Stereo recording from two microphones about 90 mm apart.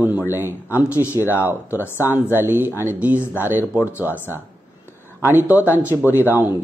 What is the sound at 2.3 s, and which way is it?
Speech, 20° right (ahead or behind).